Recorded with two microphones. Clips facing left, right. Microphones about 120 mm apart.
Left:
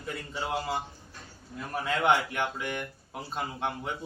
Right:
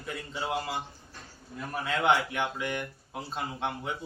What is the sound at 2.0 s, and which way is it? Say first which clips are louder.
Speech: even; 15° right (ahead or behind).